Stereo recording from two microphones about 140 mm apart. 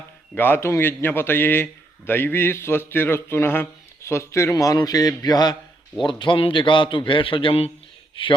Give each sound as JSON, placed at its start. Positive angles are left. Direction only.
{"t": 0.3, "sound": "a man's voice", "side_deg": 15}